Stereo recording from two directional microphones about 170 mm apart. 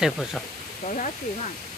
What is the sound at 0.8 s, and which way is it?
Speech, 45° left (ahead or behind).